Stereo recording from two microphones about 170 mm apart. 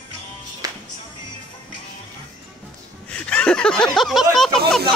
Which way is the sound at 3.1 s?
5° left (ahead or behind).